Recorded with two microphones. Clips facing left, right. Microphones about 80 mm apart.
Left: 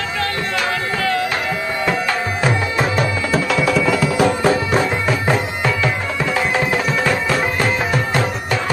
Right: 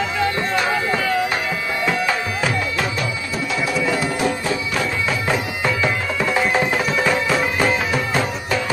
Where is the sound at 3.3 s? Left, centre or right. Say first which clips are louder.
Left 6 dB; left.